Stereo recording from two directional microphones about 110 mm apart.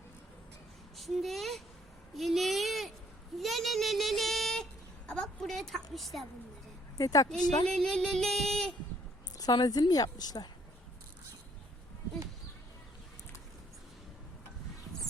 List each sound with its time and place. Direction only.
0.9 s speech: centre (ahead or behind)
2.1 s a sound: centre (ahead or behind)
3.3 s speech: centre (ahead or behind)
7.0 s a woman's voice: 35° left (ahead or behind)
7.7 s music: 5° left (ahead or behind)
9.4 s a woman's voice: 35° left (ahead or behind)